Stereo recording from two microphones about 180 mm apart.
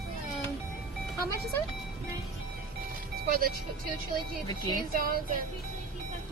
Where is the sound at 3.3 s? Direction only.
55° right (ahead or behind).